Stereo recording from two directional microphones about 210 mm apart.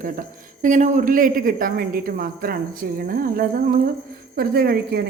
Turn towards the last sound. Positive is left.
turn(degrees=-45)  # may be behind; listen again after turning